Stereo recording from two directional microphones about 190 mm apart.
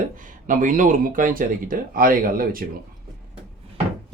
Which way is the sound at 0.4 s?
45° right (ahead or behind).